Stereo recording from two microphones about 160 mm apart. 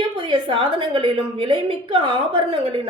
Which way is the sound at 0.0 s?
30° right (ahead or behind).